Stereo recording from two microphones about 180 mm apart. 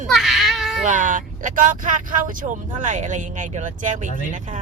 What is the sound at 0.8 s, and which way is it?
Speech, 45° right (ahead or behind).